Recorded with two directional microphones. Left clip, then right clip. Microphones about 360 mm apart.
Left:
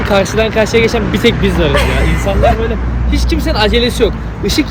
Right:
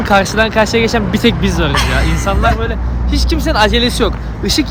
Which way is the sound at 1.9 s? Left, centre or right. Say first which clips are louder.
Left 1 dB; right.